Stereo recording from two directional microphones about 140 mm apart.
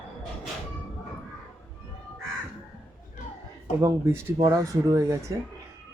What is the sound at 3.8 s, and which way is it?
Speech, 15° right (ahead or behind).